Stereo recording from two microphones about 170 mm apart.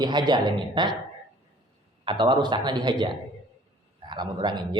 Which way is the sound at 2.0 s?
25° right (ahead or behind).